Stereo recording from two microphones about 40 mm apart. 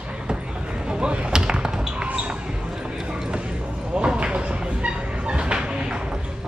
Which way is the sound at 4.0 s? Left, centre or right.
Right.